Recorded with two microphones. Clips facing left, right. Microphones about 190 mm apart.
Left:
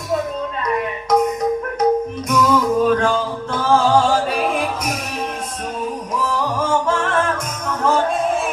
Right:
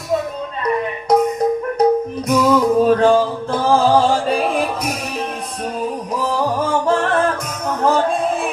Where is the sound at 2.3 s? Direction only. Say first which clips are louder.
Right 3 dB; 30° right (ahead or behind).